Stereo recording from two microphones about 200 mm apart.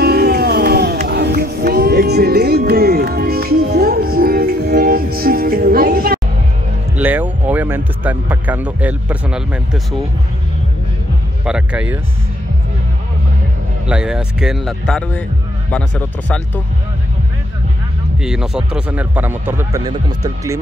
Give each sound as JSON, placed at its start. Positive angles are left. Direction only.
{"t": 0.0, "sound": "music", "side_deg": -50}
{"t": 7.0, "sound": "speech", "side_deg": -10}
{"t": 11.4, "sound": "speech", "side_deg": -5}
{"t": 13.8, "sound": "speech", "side_deg": -5}
{"t": 18.2, "sound": "speech", "side_deg": -5}